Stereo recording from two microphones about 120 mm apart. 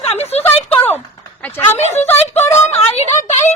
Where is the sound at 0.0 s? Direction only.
60° left (ahead or behind).